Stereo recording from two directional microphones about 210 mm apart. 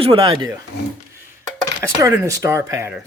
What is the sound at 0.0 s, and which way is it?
Speech, 25° right (ahead or behind).